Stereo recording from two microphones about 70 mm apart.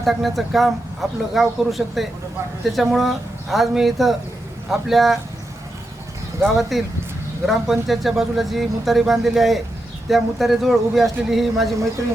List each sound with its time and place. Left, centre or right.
0.0 s speech: centre
6.4 s speech: centre